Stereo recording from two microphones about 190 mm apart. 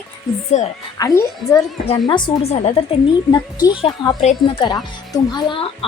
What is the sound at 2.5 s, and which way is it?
Speech, 35° left (ahead or behind).